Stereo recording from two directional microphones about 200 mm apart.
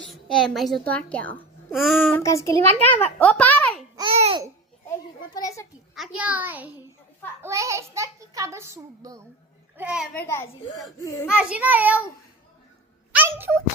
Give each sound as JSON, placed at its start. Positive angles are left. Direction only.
{"t": 0.0, "sound": "a child's voice", "side_deg": 0}
{"t": 2.0, "sound": "a child's voice", "side_deg": 10}
{"t": 3.9, "sound": "babbling", "side_deg": -25}
{"t": 4.9, "sound": "a child's voice", "side_deg": 15}
{"t": 5.9, "sound": "a child's voice", "side_deg": -5}
{"t": 9.7, "sound": "a child's voice", "side_deg": -5}
{"t": 10.2, "sound": "a child's voice", "side_deg": 15}
{"t": 11.3, "sound": "a child's voice", "side_deg": -5}
{"t": 13.1, "sound": "a sound", "side_deg": -10}